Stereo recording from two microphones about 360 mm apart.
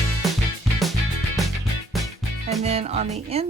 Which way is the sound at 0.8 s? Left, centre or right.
Centre.